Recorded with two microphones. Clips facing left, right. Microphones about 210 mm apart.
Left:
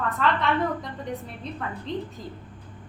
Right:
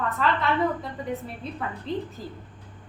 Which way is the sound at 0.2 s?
Centre (ahead or behind).